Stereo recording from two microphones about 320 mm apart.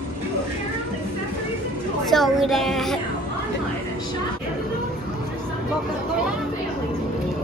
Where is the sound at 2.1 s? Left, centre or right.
Centre.